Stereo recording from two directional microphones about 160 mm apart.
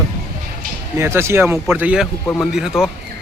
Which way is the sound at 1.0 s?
15° right (ahead or behind).